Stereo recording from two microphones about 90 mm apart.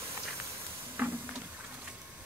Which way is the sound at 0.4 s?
30° right (ahead or behind).